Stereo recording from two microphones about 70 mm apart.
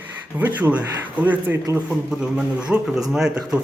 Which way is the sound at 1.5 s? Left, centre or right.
Right.